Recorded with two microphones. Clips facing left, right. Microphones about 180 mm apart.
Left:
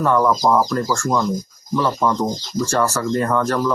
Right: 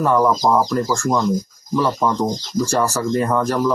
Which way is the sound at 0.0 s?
10° right (ahead or behind).